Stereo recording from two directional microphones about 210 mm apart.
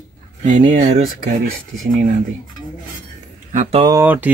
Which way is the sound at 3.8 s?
10° right (ahead or behind).